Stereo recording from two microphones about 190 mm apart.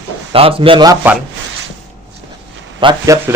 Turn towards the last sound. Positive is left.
turn(degrees=-25)  # may be behind; listen again after turning